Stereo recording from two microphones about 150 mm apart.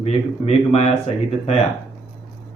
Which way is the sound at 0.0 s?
45° left (ahead or behind).